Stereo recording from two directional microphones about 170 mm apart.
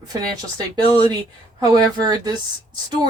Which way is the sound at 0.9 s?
25° right (ahead or behind).